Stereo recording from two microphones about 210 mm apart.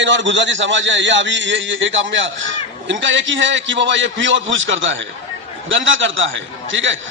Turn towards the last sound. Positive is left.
turn(degrees=-65)  # may be behind; listen again after turning